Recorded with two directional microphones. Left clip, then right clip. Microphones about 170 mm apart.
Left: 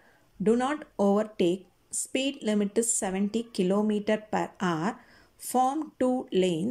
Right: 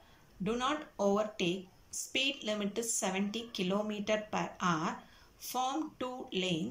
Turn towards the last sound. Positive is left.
turn(degrees=40)  # may be behind; listen again after turning